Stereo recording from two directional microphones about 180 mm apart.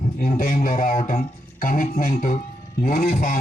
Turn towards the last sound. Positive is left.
turn(degrees=55)  # may be behind; listen again after turning